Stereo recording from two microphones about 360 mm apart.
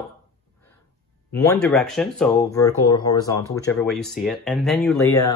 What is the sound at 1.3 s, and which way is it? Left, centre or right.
Speech, centre.